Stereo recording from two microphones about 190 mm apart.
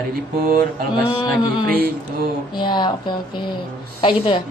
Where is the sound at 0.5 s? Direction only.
50° right (ahead or behind).